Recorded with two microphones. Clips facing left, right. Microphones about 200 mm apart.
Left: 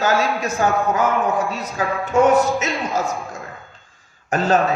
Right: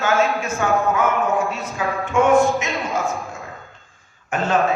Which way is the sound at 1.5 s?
40° left (ahead or behind).